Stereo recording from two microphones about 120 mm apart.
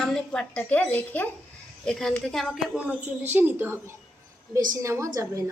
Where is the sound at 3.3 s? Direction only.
15° right (ahead or behind).